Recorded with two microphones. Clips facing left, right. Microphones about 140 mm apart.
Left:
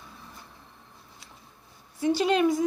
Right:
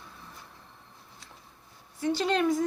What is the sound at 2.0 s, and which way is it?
Speech, 10° left (ahead or behind).